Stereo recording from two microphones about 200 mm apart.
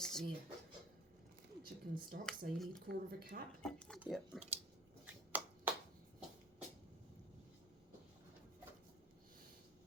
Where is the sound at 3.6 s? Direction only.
5° left (ahead or behind).